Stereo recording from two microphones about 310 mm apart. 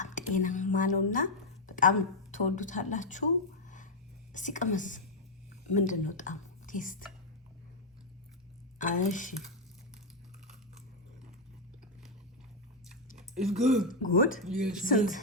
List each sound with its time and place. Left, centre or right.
0.0 s a woman's voice: left
4.3 s a woman's voice: left
8.8 s a woman's voice: left
12.9 s chewing: centre
13.8 s a woman's voice: left
14.4 s speech: centre
14.8 s a woman's voice: left